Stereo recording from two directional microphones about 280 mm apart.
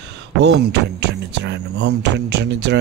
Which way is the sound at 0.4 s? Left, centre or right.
Right.